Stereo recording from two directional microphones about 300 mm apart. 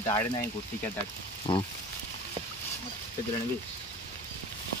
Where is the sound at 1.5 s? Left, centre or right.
Centre.